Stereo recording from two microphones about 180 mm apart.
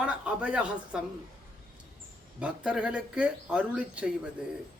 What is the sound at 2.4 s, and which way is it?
A man's voice, 5° right (ahead or behind).